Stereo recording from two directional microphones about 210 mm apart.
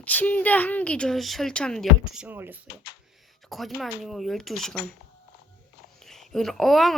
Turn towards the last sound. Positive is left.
turn(degrees=0)  # may be behind; listen again after turning